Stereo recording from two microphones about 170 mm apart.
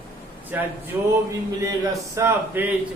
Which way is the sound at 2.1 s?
15° right (ahead or behind).